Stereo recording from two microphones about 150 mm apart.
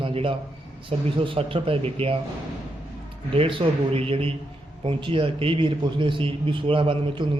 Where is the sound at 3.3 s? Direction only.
35° right (ahead or behind).